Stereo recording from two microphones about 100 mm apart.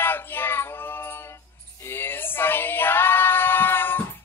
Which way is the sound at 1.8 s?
20° left (ahead or behind).